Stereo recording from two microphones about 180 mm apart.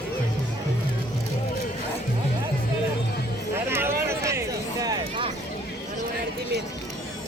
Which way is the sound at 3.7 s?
15° right (ahead or behind).